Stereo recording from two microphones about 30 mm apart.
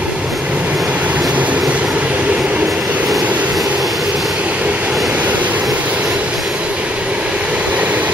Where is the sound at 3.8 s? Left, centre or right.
Centre.